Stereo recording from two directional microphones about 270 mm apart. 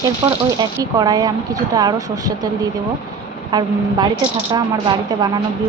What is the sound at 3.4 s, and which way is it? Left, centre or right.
A woman's voice, centre.